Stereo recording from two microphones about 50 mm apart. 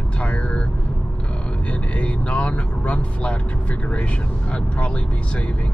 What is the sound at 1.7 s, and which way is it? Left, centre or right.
Speech, left.